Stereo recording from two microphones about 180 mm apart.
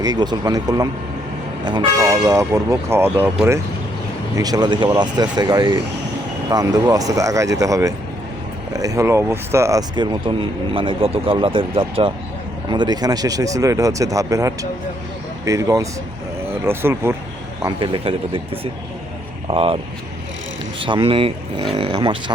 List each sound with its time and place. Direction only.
0.0 s speech: 20° right (ahead or behind)
2.0 s speech: 15° right (ahead or behind)
17.7 s speech: 30° right (ahead or behind)